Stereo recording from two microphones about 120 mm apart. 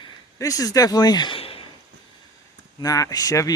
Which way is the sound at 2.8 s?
30° left (ahead or behind).